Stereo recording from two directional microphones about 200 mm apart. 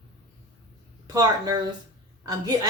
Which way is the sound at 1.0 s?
20° right (ahead or behind).